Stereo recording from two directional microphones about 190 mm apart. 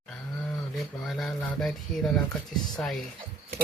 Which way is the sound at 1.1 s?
Centre (ahead or behind).